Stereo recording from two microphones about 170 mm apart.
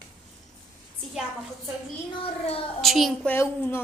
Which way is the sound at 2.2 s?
35° left (ahead or behind).